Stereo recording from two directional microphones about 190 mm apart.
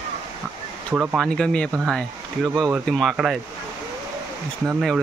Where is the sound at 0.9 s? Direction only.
10° right (ahead or behind).